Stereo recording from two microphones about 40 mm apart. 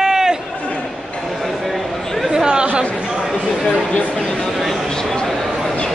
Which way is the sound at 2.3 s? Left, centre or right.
Centre.